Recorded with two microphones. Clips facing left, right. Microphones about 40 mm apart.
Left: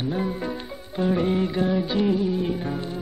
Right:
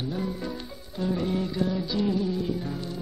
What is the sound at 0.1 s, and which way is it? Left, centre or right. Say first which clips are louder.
Music: left 4 dB; left.